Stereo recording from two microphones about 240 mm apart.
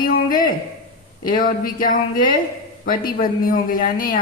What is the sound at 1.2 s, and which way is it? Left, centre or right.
A woman's voice, left.